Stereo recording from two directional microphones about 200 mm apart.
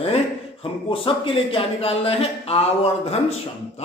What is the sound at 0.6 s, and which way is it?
Speech, 25° left (ahead or behind).